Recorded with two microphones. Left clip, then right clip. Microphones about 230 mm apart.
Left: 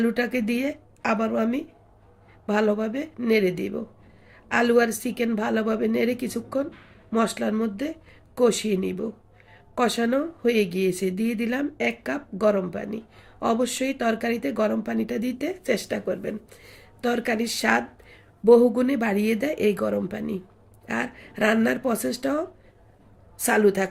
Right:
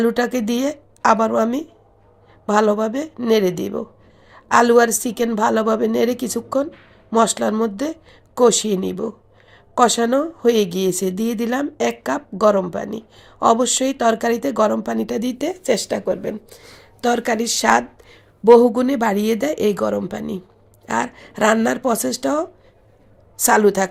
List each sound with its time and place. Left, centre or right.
0.0 s a woman's voice: centre